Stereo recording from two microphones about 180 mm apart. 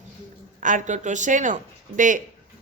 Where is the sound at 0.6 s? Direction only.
45° right (ahead or behind).